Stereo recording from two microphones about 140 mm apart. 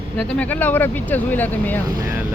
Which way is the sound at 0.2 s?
10° left (ahead or behind).